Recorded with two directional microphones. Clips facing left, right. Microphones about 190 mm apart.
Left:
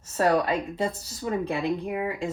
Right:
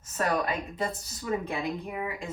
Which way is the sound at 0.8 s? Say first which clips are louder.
Left 4 dB; 30° left (ahead or behind).